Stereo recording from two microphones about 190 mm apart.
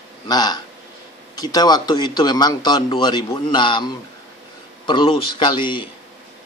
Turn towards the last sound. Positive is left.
turn(degrees=25)  # may be behind; listen again after turning